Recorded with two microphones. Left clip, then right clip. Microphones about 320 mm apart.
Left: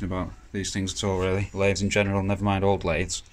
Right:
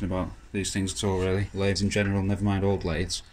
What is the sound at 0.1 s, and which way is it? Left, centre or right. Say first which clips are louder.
Speech: right 1 dB; centre.